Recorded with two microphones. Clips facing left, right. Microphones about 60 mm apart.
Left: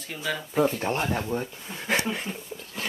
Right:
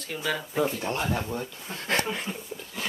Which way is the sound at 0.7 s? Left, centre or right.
Left.